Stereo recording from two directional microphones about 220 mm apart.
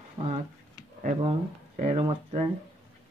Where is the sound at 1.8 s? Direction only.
30° right (ahead or behind).